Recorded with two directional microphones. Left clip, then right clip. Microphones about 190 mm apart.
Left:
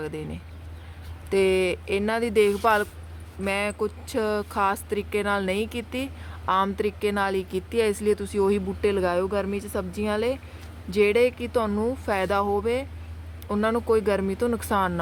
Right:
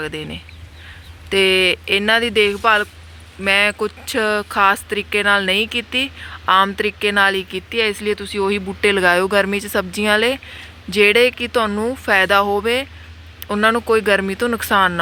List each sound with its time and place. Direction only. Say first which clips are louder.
0.0 s a woman's voice: right 7 dB; centre (ahead or behind)
8.9 s a woman's voice: right 10 dB; 5° right (ahead or behind)